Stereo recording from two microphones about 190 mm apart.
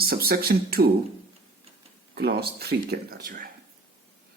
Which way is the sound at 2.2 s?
55° right (ahead or behind).